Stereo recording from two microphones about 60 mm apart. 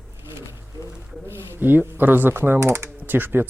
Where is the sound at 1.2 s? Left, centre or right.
Right.